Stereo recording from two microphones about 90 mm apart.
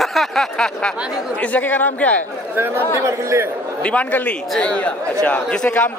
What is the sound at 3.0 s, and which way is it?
Speech, 30° right (ahead or behind).